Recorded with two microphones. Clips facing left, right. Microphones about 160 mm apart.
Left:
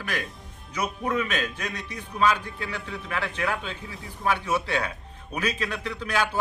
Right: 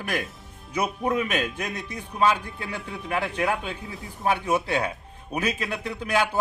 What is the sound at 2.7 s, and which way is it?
A man's voice, 15° right (ahead or behind).